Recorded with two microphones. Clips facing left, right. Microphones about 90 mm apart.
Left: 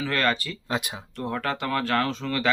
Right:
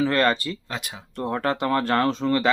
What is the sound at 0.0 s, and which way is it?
Speech, 30° right (ahead or behind).